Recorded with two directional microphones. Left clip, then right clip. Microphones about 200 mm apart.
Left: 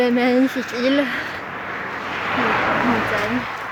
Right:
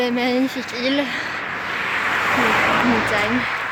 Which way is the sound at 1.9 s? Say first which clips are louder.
Right 5 dB; 30° right (ahead or behind).